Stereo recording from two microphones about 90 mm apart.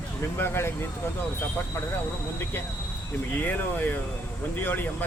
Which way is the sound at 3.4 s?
20° left (ahead or behind).